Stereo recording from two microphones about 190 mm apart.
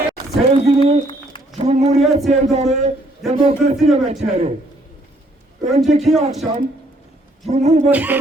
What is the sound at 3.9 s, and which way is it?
Speech, 35° right (ahead or behind).